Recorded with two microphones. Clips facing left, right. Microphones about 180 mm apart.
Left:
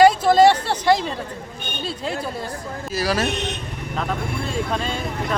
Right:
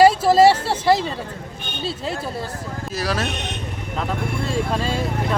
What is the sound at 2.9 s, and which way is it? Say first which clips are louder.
Speech: left 3 dB; centre (ahead or behind).